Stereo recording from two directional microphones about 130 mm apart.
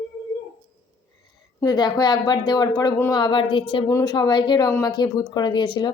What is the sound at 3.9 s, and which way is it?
Speech, 30° left (ahead or behind).